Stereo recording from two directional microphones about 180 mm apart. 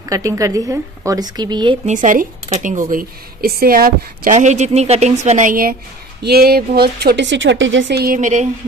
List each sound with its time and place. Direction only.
0.1 s a woman's voice: 20° right (ahead or behind)
1.9 s speech: 45° right (ahead or behind)